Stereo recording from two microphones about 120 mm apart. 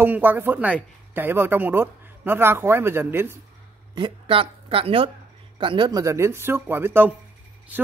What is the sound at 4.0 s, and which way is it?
A man's voice, 45° right (ahead or behind).